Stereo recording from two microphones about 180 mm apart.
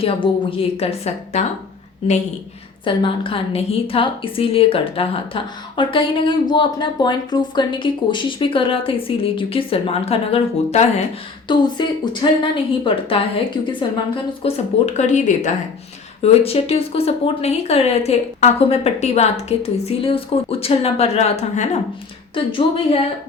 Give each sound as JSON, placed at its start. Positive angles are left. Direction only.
{"t": 0.2, "sound": "a woman's voice", "side_deg": 30}
{"t": 2.8, "sound": "a woman's voice", "side_deg": 30}
{"t": 11.4, "sound": "a woman's voice", "side_deg": 25}
{"t": 22.4, "sound": "a woman's voice", "side_deg": 30}